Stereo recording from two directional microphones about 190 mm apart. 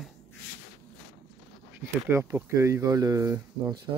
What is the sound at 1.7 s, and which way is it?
Speech, 10° right (ahead or behind).